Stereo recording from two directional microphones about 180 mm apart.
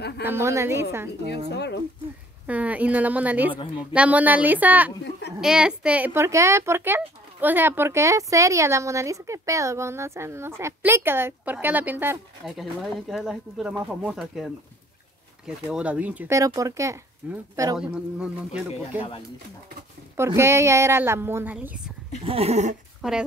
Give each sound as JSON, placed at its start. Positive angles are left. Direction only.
{"t": 0.2, "sound": "speech", "side_deg": -15}
{"t": 1.5, "sound": "speech", "side_deg": 70}
{"t": 2.4, "sound": "speech", "side_deg": -10}
{"t": 17.7, "sound": "speech", "side_deg": -5}
{"t": 18.7, "sound": "speech", "side_deg": 30}
{"t": 20.2, "sound": "speech", "side_deg": -15}
{"t": 22.2, "sound": "dog", "side_deg": -35}